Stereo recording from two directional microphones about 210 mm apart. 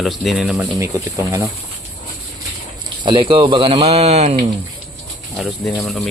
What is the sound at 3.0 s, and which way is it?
Speech, 25° right (ahead or behind).